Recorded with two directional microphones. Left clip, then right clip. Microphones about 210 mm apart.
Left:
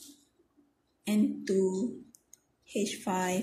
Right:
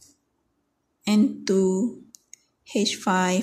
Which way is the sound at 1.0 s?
35° right (ahead or behind).